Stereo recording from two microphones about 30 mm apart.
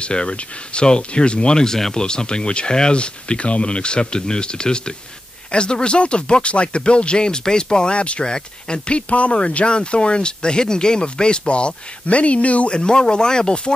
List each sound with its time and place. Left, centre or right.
0.0 s speech: left
2.9 s speech: left
12.7 s speech: left